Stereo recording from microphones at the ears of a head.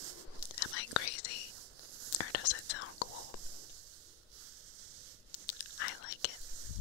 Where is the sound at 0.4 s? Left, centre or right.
Left.